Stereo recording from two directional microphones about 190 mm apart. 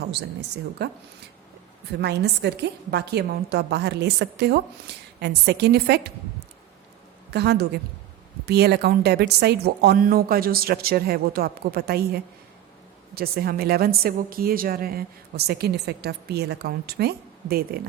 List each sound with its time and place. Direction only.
0.8 s a woman's voice: 60° right (ahead or behind)
7.3 s a woman's voice: 60° right (ahead or behind)